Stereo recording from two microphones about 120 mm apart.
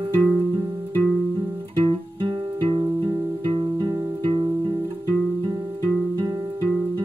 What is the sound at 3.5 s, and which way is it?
Music, 45° right (ahead or behind).